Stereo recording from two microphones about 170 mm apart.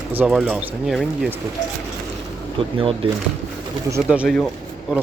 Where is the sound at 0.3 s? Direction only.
Centre (ahead or behind).